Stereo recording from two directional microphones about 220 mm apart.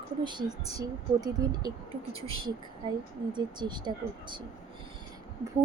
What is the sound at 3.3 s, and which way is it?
Speech, 20° right (ahead or behind).